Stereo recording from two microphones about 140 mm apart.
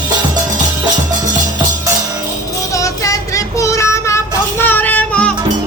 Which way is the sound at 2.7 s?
20° left (ahead or behind).